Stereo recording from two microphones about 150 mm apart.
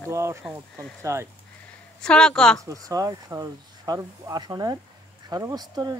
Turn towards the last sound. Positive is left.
turn(degrees=-25)  # may be behind; listen again after turning